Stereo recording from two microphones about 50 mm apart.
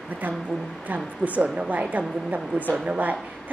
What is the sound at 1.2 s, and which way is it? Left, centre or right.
A woman's voice, right.